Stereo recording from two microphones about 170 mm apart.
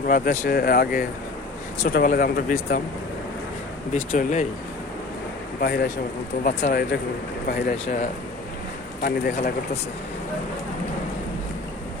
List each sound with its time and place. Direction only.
0.1 s speech: 55° left (ahead or behind)
3.9 s speech: 55° left (ahead or behind)
5.5 s speech: 65° left (ahead or behind)
6.4 s speech: 45° left (ahead or behind)
7.4 s speech: 60° left (ahead or behind)
9.0 s speech: 60° left (ahead or behind)